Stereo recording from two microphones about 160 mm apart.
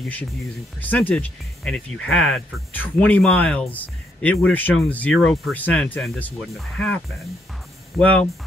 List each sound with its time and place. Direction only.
0.7 s speech: 10° left (ahead or behind)
8.0 s speech: 10° left (ahead or behind)